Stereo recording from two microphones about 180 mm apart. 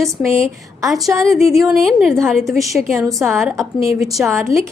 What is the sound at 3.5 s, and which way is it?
A woman's voice, 15° right (ahead or behind).